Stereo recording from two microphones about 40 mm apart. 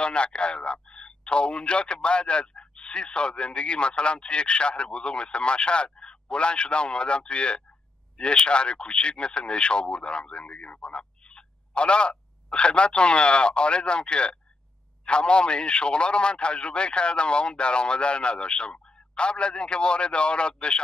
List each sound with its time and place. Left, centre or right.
0.0 s speech: left